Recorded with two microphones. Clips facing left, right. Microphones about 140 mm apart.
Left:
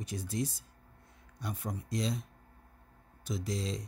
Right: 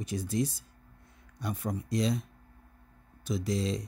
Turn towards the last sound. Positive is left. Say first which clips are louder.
# right 5 dB
turn(degrees=-70)  # may be behind; listen again after turning